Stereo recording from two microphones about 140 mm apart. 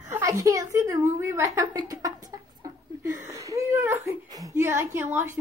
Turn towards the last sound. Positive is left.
turn(degrees=-15)  # may be behind; listen again after turning